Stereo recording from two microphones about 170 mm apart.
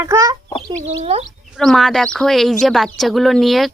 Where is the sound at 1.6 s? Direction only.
Centre (ahead or behind).